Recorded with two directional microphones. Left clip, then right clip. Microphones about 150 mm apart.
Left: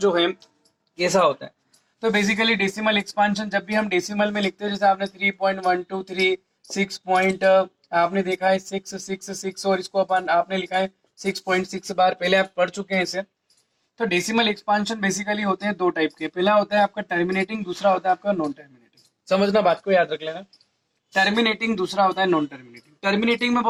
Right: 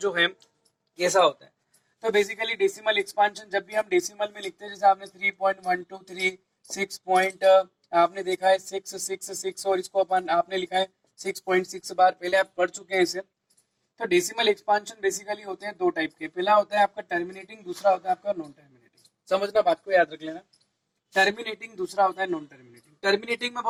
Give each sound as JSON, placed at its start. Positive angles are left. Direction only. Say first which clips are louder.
{"t": 0.0, "sound": "speech", "louder": "left 4 dB", "side_deg": 15}
{"t": 0.9, "sound": "speech", "louder": "left 2 dB", "side_deg": 25}
{"t": 19.2, "sound": "a man's voice", "louder": "left 5 dB", "side_deg": 40}
{"t": 19.8, "sound": "speech", "louder": "left 3 dB", "side_deg": 25}